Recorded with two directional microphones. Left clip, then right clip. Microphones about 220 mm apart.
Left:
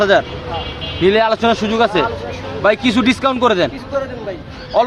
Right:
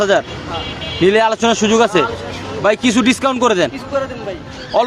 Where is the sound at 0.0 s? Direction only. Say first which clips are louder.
Left 1 dB; 15° right (ahead or behind).